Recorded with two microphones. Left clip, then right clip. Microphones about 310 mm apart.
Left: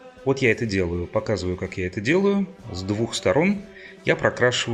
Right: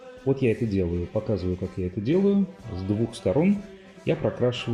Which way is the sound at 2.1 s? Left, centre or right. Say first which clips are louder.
Left 2 dB; left.